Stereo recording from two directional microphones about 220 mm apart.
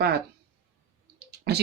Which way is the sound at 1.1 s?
50° right (ahead or behind).